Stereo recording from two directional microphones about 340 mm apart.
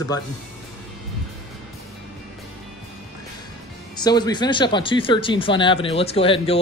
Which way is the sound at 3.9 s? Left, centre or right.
Centre.